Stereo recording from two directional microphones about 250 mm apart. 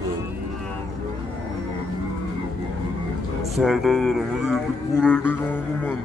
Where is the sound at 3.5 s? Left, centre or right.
Centre.